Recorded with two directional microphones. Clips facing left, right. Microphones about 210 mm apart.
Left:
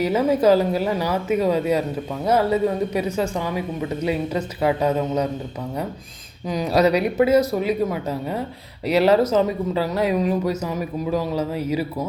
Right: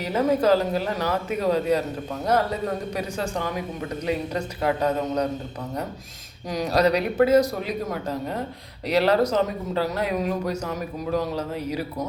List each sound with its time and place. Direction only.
0.0 s speech: 10° left (ahead or behind)
6.5 s speech: 5° left (ahead or behind)